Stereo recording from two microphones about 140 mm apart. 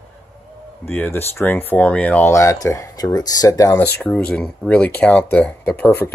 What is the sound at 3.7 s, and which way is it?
Speech, 10° left (ahead or behind).